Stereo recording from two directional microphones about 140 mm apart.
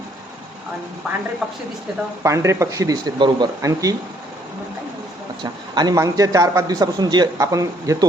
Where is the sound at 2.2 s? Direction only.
20° right (ahead or behind).